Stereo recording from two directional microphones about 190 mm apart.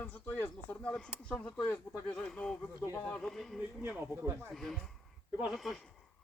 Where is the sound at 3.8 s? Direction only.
15° right (ahead or behind).